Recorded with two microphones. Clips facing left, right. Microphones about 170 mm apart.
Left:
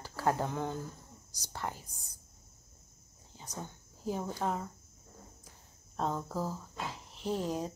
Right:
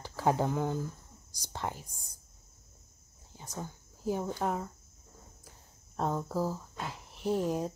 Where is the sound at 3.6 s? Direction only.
10° right (ahead or behind).